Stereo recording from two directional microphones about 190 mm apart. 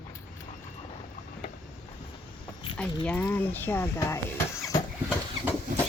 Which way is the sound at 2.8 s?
5° left (ahead or behind).